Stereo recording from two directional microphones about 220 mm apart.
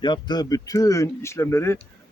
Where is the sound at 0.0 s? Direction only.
20° left (ahead or behind).